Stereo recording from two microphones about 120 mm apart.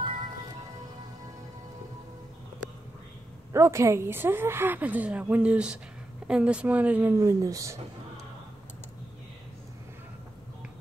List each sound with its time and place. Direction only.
3.5 s a woman's voice: 25° right (ahead or behind)
7.2 s speech: 30° right (ahead or behind)